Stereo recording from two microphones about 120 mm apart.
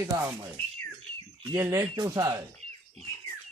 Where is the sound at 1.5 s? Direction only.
25° right (ahead or behind).